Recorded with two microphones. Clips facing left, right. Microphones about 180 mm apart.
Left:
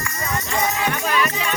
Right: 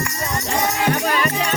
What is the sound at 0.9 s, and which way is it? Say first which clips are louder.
Music: right 2 dB; 40° right (ahead or behind).